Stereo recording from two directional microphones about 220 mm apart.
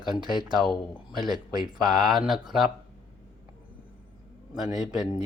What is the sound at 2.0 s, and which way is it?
Speech, centre (ahead or behind).